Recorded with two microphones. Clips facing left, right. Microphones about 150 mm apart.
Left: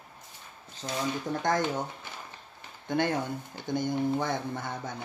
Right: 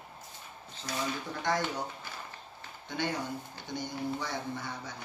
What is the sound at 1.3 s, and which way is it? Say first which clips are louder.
Speech: left 5 dB; 45° left (ahead or behind).